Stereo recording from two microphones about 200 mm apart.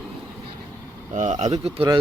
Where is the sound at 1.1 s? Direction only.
35° right (ahead or behind).